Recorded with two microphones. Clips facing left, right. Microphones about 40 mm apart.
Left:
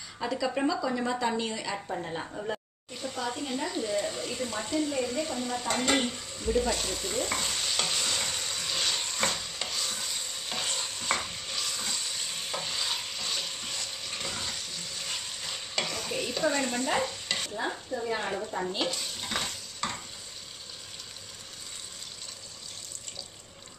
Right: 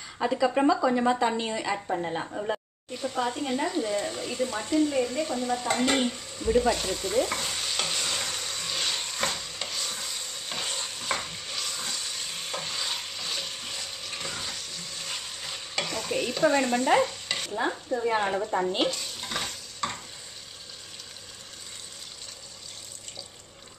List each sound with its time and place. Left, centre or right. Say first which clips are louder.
0.2 s a woman's voice: right 5 dB; right; by 6.5 s centre
6.6 s stir: right 4 dB; centre
16.2 s frying: right 5 dB; centre
17.5 s stir: right 8 dB; right
18.0 s speech: right 6 dB; right
18.9 s stir: right 2 dB; centre